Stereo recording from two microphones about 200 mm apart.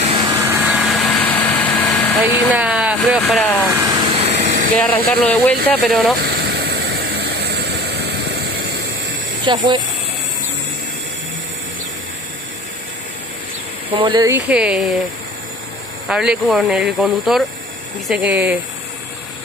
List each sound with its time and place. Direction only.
0.2 s vehicle: 10° right (ahead or behind); by 2.1 s 5° left (ahead or behind)
2.5 s speech: 5° right (ahead or behind)
3.6 s vehicle: 15° right (ahead or behind)
4.3 s air conditioning: 60° right (ahead or behind)
5.1 s speech: 5° left (ahead or behind)
6.1 s vehicle: 55° right (ahead or behind)
9.4 s speech: 25° right (ahead or behind)
13.9 s speech: 20° right (ahead or behind)
14.5 s speech: 5° right (ahead or behind)
16.1 s speech: 5° right (ahead or behind)